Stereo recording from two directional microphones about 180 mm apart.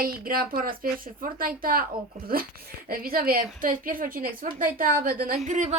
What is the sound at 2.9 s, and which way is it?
A woman's voice, 55° right (ahead or behind).